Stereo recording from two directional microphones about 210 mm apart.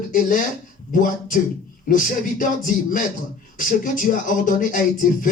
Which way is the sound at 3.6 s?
40° left (ahead or behind).